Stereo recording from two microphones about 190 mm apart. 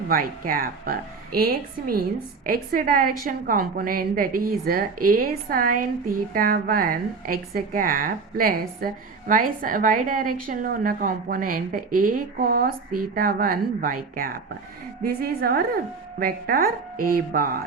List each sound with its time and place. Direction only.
0.1 s a woman's voice: 50° right (ahead or behind)